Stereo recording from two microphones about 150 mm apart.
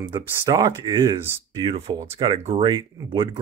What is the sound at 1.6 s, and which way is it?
Speech, 40° right (ahead or behind).